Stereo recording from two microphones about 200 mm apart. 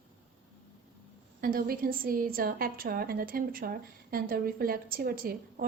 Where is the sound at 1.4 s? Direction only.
45° right (ahead or behind).